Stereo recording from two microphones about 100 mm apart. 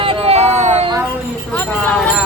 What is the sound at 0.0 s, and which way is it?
Vehicle, 70° right (ahead or behind).